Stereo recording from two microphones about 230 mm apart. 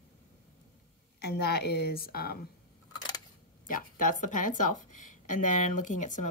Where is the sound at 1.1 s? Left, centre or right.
Left.